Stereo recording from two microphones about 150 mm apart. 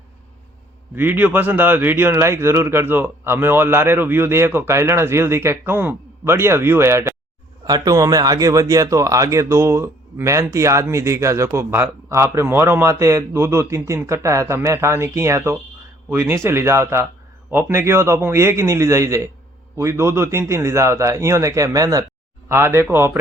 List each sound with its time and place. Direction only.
0.9 s speech: 10° right (ahead or behind)